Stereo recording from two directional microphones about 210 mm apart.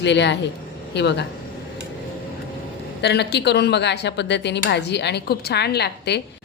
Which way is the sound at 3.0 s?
50° left (ahead or behind).